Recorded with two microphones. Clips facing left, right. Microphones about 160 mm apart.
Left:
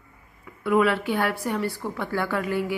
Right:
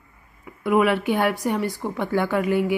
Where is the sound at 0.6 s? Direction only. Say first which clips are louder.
Right 2 dB; 15° right (ahead or behind).